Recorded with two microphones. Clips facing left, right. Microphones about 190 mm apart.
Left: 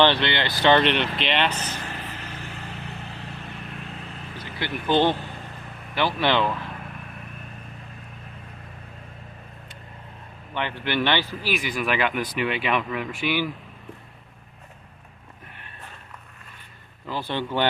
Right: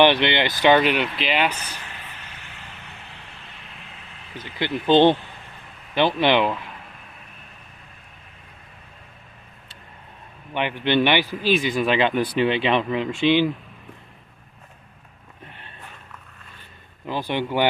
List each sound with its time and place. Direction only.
0.0 s a man's voice: 15° right (ahead or behind)
1.6 s a sound: 40° left (ahead or behind)
3.5 s vehicle: 50° left (ahead or behind)
4.6 s speech: 20° right (ahead or behind)
10.5 s a man's voice: 15° right (ahead or behind)
11.5 s speech: 25° right (ahead or behind)
17.1 s a man's voice: 15° right (ahead or behind)